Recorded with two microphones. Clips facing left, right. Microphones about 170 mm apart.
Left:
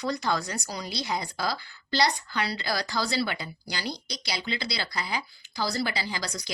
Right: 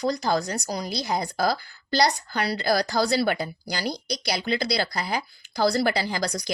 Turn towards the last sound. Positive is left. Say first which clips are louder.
# right 6 dB
turn(degrees=-45)  # may be behind; listen again after turning